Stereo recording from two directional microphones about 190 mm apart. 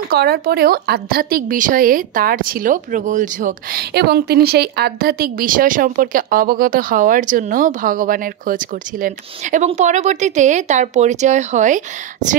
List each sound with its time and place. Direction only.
0.1 s a woman's voice: 55° right (ahead or behind); by 11.8 s 40° right (ahead or behind)